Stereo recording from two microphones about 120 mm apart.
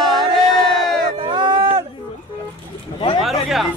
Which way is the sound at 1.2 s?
40° right (ahead or behind).